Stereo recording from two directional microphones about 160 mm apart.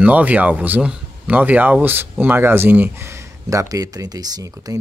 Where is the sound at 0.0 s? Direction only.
10° right (ahead or behind).